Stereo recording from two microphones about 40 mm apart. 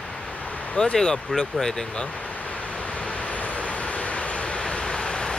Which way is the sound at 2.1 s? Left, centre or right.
Left.